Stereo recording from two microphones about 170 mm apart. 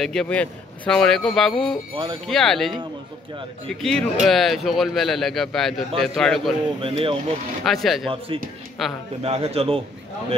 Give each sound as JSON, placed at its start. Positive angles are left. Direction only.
{"t": 0.0, "sound": "speech", "side_deg": 5}
{"t": 6.8, "sound": "a man's voice", "side_deg": -35}
{"t": 7.6, "sound": "speech", "side_deg": 0}
{"t": 9.2, "sound": "a man's voice", "side_deg": -35}